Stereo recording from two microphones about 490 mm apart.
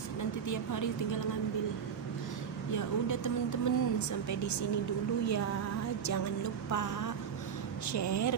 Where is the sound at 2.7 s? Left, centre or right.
Left.